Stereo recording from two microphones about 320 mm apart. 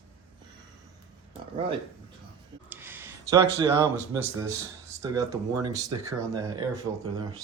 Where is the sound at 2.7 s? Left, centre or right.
Centre.